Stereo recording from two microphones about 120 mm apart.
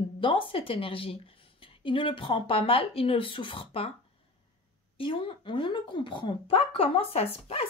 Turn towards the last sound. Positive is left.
turn(degrees=55)  # may be behind; listen again after turning